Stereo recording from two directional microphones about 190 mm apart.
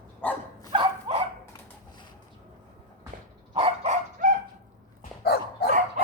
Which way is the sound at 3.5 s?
30° right (ahead or behind).